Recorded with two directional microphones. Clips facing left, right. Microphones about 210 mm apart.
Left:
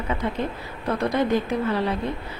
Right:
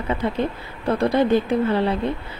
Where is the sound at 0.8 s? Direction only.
30° right (ahead or behind).